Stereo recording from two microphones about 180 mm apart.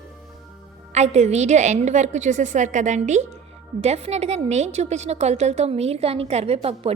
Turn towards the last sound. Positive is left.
turn(degrees=-35)  # may be behind; listen again after turning